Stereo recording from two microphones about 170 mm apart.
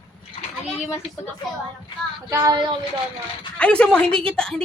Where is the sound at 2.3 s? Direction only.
20° right (ahead or behind).